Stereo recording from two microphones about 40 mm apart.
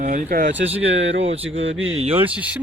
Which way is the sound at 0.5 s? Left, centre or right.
Right.